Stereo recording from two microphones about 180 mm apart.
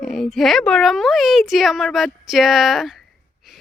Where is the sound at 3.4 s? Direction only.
Centre (ahead or behind).